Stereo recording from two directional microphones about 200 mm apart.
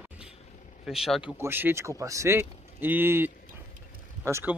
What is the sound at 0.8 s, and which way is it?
Speech, centre (ahead or behind).